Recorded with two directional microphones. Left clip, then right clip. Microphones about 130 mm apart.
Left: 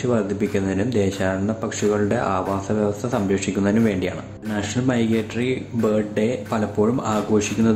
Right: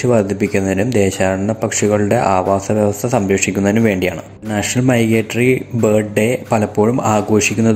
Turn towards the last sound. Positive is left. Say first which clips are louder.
# right 6 dB
turn(degrees=-35)  # may be behind; listen again after turning